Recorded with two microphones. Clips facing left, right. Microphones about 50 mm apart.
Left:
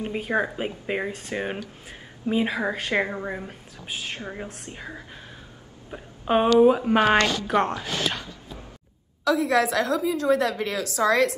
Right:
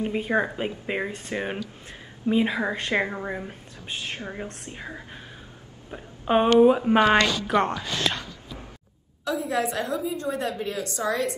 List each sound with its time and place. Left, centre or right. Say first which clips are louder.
0.0 s a woman's voice: right 1 dB; centre
7.2 s a woman's voice: even; left
7.4 s a woman's voice: even; centre
9.2 s a woman's voice: left 5 dB; left